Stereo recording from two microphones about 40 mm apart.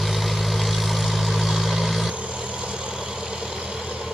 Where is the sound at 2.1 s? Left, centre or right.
Right.